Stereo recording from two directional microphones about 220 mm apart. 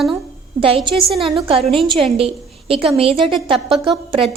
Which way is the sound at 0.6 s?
25° right (ahead or behind).